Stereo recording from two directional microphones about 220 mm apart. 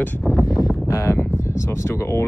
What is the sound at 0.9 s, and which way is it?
Speech, 15° left (ahead or behind).